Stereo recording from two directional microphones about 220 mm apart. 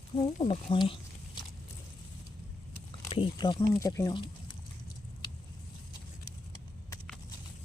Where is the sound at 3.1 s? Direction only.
20° left (ahead or behind).